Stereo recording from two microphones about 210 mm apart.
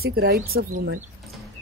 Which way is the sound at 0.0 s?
50° right (ahead or behind).